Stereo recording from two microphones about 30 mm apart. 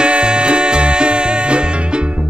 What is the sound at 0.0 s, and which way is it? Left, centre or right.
Music, right.